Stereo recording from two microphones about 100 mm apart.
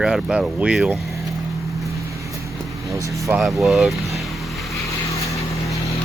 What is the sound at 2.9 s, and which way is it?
Speech, 30° right (ahead or behind).